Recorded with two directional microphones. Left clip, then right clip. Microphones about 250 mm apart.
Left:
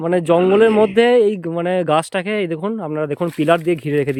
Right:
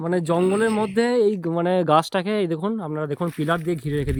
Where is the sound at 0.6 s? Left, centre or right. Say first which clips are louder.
Left 9 dB; left.